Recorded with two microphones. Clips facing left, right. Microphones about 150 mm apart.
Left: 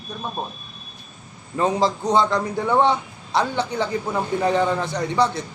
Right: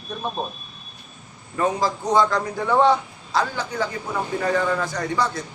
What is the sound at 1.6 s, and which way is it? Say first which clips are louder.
A man's voice: left 2 dB; 25° left (ahead or behind).